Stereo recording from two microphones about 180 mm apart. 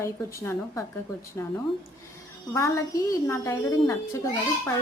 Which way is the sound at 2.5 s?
15° left (ahead or behind).